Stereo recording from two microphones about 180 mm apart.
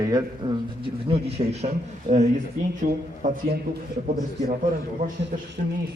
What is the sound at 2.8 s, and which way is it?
Speech, 50° right (ahead or behind).